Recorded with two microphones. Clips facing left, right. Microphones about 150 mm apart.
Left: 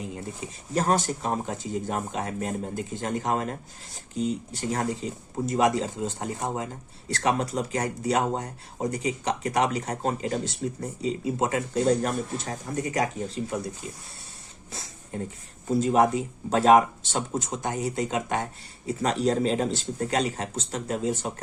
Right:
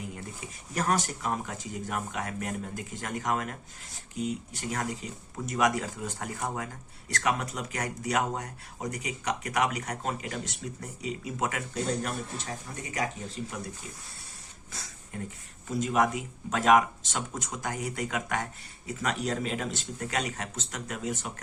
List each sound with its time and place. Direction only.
0.0 s speech: 25° left (ahead or behind)
14.7 s a sound: 25° left (ahead or behind)
15.6 s speech: 30° left (ahead or behind)